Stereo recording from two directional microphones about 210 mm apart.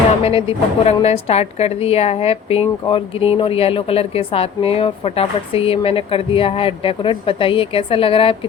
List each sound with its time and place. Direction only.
0.2 s a woman's voice: 25° left (ahead or behind)